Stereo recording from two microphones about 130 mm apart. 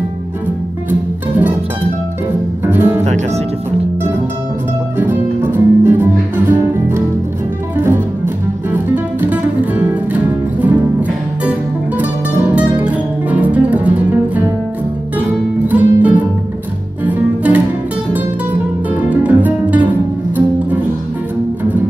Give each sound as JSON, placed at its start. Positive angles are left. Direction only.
{"t": 2.6, "sound": "music", "side_deg": -15}
{"t": 3.0, "sound": "speech", "side_deg": -60}
{"t": 4.9, "sound": "music", "side_deg": -15}
{"t": 7.7, "sound": "music", "side_deg": -15}